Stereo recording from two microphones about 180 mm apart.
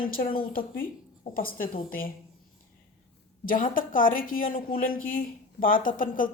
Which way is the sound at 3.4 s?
50° left (ahead or behind).